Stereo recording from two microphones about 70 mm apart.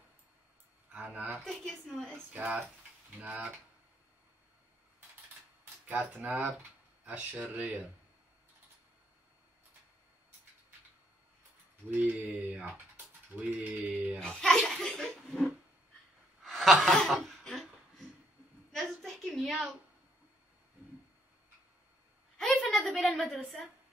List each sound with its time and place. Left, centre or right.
0.9 s a woman's voice: centre
1.4 s a child's voice: centre
2.3 s mantra: right
5.9 s mantra: right
11.9 s mantra: right
13.5 s mantra: right
14.2 s a child's voice: centre
16.4 s chuckle: centre
16.9 s a sound: centre
22.4 s a woman's voice: centre